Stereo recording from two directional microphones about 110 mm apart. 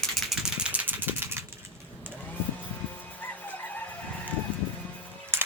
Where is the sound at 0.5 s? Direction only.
10° right (ahead or behind).